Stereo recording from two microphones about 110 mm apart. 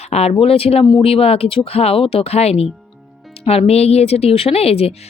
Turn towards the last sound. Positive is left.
turn(degrees=65)  # may be behind; listen again after turning